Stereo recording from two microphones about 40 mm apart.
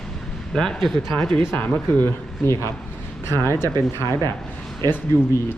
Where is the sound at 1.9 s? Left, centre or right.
Left.